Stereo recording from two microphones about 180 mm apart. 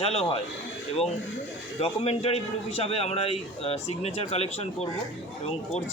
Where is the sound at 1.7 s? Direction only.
35° left (ahead or behind).